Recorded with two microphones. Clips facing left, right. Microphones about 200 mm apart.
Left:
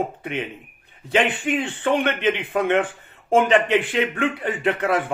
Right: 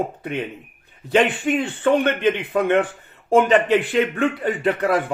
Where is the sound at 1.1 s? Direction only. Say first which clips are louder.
Right 3 dB; 40° right (ahead or behind).